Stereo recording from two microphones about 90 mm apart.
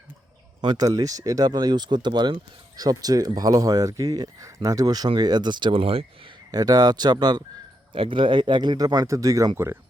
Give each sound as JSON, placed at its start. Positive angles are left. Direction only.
{"t": 0.6, "sound": "speech", "side_deg": -55}
{"t": 0.9, "sound": "speech", "side_deg": -40}
{"t": 5.0, "sound": "speech", "side_deg": -55}
{"t": 6.5, "sound": "speech", "side_deg": -45}
{"t": 7.9, "sound": "speech", "side_deg": -75}
{"t": 9.0, "sound": "speech", "side_deg": -35}